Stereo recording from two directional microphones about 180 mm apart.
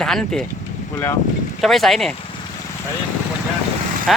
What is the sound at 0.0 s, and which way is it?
Speech, centre (ahead or behind).